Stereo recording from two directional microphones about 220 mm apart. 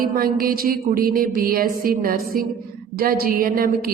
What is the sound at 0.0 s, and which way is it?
A woman's voice, 40° right (ahead or behind).